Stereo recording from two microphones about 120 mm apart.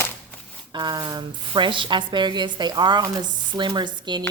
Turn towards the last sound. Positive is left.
turn(degrees=-40)  # may be behind; listen again after turning